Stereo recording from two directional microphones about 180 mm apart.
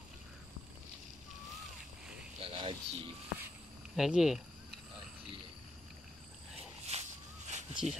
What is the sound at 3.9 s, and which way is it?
Speech, centre (ahead or behind).